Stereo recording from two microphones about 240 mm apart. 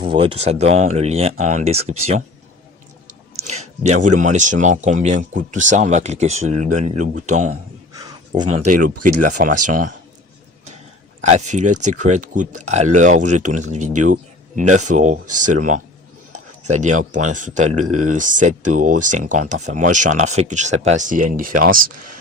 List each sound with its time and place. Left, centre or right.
0.0 s speech: right
3.4 s speech: right
7.9 s a sound: centre; by 8.9 s right
9.0 s speech: right
11.2 s speech: right